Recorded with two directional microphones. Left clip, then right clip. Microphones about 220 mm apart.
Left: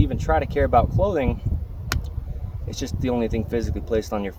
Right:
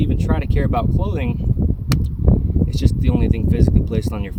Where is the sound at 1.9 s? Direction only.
20° right (ahead or behind).